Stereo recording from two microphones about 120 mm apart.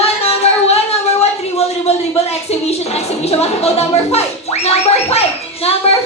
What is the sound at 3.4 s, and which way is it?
A woman's voice, 60° left (ahead or behind).